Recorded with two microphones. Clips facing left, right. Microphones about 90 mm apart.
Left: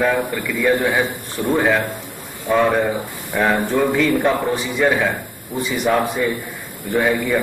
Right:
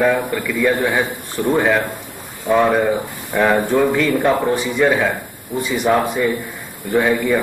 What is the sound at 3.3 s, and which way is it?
A man's voice, centre (ahead or behind).